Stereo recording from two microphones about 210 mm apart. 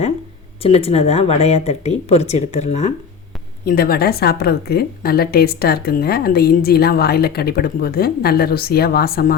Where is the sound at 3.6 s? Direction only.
45° left (ahead or behind).